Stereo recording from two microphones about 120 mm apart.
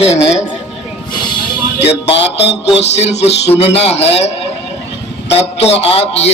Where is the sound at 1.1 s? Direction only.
40° left (ahead or behind).